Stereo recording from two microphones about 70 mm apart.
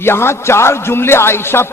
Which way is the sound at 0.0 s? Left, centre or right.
Left.